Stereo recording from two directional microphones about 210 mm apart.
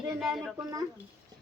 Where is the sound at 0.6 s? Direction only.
15° right (ahead or behind).